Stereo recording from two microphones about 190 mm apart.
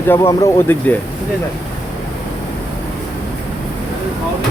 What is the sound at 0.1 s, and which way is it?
Speech, 15° left (ahead or behind).